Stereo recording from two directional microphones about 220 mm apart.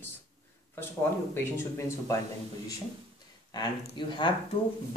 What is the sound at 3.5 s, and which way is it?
Speech, 20° left (ahead or behind).